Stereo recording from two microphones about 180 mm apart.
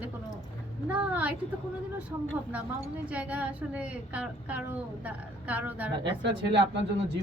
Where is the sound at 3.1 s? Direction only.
5° right (ahead or behind).